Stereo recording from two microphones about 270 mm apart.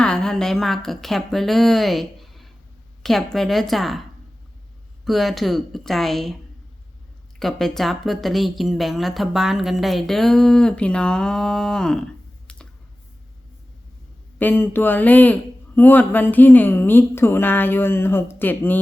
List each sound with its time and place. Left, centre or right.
0.0 s speech: centre
5.0 s speech: centre
7.3 s speech: centre
14.3 s speech: centre